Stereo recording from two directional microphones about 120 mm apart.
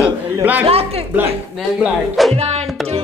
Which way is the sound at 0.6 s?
55° right (ahead or behind).